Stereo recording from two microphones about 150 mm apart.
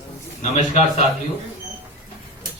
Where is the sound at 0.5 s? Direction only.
45° left (ahead or behind).